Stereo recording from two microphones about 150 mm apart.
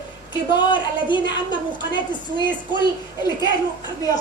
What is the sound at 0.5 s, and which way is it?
A woman's voice, 30° left (ahead or behind).